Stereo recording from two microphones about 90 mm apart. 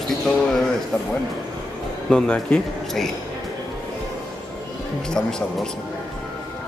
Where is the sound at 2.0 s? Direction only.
10° left (ahead or behind).